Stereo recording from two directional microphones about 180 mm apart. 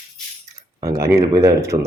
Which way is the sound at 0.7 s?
15° right (ahead or behind).